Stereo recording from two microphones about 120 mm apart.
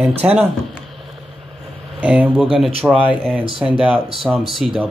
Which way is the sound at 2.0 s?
10° right (ahead or behind).